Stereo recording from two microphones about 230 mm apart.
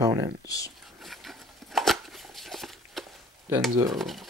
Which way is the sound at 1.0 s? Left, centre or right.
Centre.